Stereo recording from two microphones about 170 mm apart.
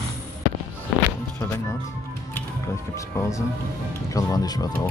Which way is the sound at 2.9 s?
15° left (ahead or behind).